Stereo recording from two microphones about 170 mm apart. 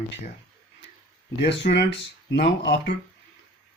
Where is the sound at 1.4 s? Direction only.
80° left.